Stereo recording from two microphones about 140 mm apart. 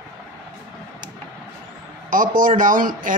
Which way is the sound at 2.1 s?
80° right.